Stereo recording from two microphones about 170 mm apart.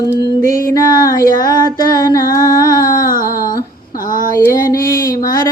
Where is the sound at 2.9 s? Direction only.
55° left (ahead or behind).